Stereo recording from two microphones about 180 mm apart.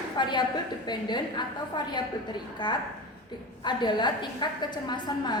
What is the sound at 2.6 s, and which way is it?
A woman's voice, 25° left (ahead or behind).